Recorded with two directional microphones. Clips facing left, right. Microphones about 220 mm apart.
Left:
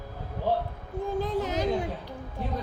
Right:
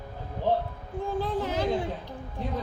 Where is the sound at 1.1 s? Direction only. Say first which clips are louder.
Left 1 dB; 20° left (ahead or behind).